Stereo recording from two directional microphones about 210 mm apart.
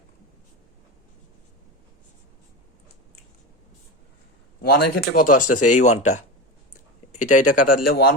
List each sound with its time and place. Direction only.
4.6 s speech: 50° left (ahead or behind)
5.3 s speech: 90° left
5.5 s speech: 35° left (ahead or behind)
7.1 s speech: 35° left (ahead or behind)